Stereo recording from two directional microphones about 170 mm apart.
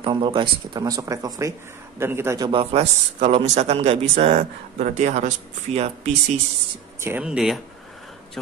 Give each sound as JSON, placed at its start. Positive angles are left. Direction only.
{"t": 0.0, "sound": "a man's voice", "side_deg": -30}
{"t": 2.6, "sound": "a man's voice", "side_deg": -35}
{"t": 4.4, "sound": "speech", "side_deg": -45}
{"t": 7.0, "sound": "speech", "side_deg": -10}